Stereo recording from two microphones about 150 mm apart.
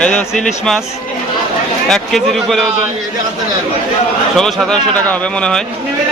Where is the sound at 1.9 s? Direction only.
5° left (ahead or behind).